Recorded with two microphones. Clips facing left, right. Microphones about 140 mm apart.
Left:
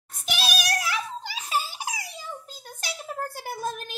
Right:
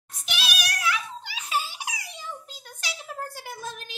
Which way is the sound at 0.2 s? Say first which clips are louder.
Left 4 dB; 40° left (ahead or behind).